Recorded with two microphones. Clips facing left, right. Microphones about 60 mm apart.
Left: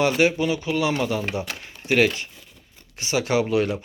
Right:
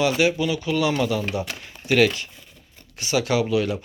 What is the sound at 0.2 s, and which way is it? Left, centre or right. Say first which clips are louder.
A man's voice: left 1 dB; left.